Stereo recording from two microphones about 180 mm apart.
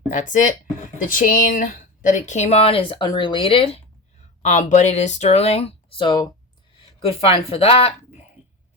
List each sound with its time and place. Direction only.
0.1 s speech: 45° left (ahead or behind)
4.2 s speech: 40° left (ahead or behind)